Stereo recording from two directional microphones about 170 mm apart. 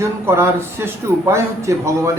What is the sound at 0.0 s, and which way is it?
A man's voice, 15° right (ahead or behind).